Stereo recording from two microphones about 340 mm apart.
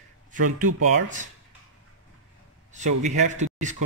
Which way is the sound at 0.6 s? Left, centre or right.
Right.